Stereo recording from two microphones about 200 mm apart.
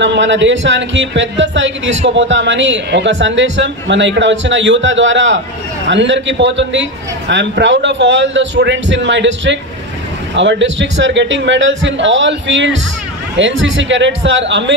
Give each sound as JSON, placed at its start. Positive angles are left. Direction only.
{"t": 0.0, "sound": "a man's voice", "side_deg": -65}